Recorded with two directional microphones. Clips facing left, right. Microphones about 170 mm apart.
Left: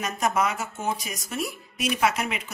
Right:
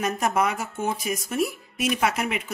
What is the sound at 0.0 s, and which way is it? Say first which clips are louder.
Speech: right 2 dB; 55° right (ahead or behind).